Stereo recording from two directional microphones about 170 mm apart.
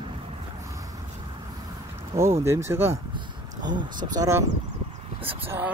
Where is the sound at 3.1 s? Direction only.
25° right (ahead or behind).